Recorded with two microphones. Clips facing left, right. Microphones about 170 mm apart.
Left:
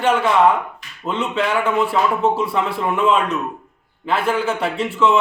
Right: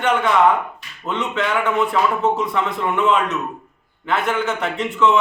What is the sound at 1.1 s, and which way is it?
Speech, 30° left (ahead or behind).